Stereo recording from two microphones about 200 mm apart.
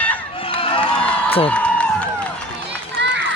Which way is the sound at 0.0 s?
5° left (ahead or behind).